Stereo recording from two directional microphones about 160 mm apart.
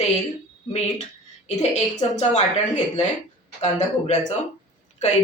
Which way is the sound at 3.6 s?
45° left (ahead or behind).